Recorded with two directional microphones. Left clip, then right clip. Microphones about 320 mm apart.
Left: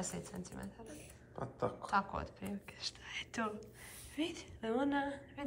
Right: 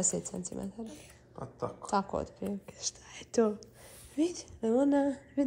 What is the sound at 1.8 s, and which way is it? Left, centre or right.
A woman's voice, centre.